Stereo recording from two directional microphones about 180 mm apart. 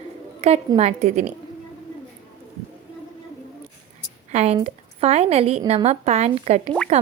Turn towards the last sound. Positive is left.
turn(degrees=-40)  # may be behind; listen again after turning